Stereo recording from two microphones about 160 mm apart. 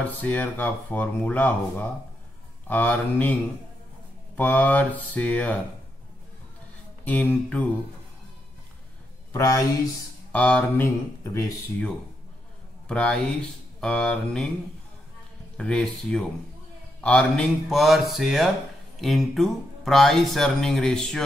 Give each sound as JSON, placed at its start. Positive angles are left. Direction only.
{"t": 0.0, "sound": "speech", "side_deg": 10}
{"t": 4.4, "sound": "speech", "side_deg": 10}
{"t": 7.1, "sound": "speech", "side_deg": 10}
{"t": 9.3, "sound": "speech", "side_deg": 20}
{"t": 10.3, "sound": "speech", "side_deg": 5}
{"t": 12.8, "sound": "speech", "side_deg": 5}
{"t": 15.5, "sound": "speech", "side_deg": 5}